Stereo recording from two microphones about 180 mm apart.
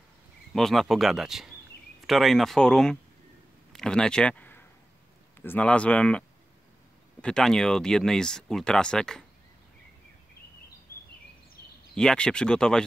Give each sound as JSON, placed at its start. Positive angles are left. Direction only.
{"t": 0.5, "sound": "speech", "side_deg": 0}
{"t": 10.9, "sound": "a sound", "side_deg": 55}
{"t": 11.9, "sound": "speech", "side_deg": 5}